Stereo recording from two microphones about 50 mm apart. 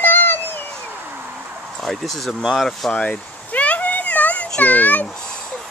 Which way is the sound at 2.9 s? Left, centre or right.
Left.